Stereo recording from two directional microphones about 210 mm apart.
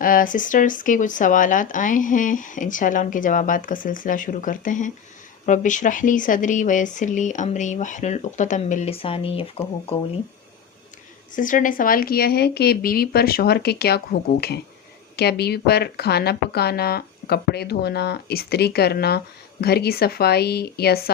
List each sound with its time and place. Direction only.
0.0 s speech: 40° left (ahead or behind)
11.3 s speech: 40° left (ahead or behind)